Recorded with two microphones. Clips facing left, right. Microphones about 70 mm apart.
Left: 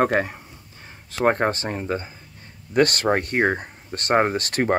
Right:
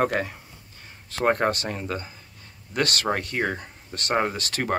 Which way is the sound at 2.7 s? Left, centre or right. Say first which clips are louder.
Left 6 dB; left.